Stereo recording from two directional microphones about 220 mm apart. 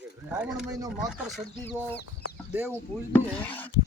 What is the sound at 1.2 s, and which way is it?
Speech, centre (ahead or behind).